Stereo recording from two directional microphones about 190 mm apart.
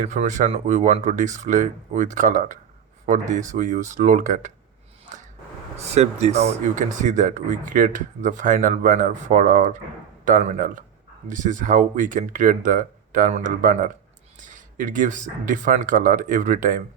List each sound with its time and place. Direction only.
0.0 s speech: 40° right (ahead or behind)
5.7 s speech: 35° right (ahead or behind)